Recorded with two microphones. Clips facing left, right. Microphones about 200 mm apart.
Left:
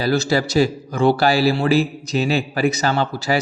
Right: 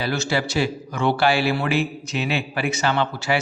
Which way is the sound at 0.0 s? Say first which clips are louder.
Left 5 dB; 35° left (ahead or behind).